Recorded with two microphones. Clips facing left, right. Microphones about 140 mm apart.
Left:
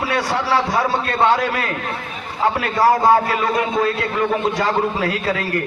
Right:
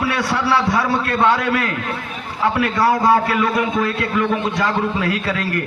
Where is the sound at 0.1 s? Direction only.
25° left (ahead or behind).